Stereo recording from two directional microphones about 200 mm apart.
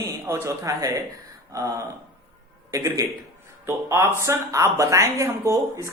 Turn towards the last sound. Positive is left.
turn(degrees=-15)  # may be behind; listen again after turning